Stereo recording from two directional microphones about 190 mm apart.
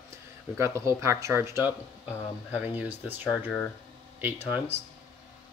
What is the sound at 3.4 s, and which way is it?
Speech, 10° left (ahead or behind).